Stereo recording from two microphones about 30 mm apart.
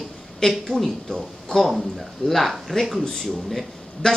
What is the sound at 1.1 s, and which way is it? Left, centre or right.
Speech, left.